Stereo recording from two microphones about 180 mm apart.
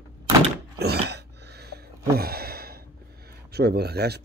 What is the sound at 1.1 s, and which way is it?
Gasp, 70° right (ahead or behind).